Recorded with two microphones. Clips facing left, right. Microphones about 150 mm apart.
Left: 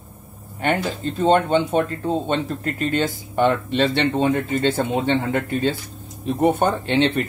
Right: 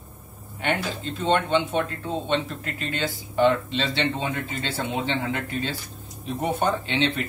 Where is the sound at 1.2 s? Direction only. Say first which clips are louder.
Left 5 dB; 40° left (ahead or behind).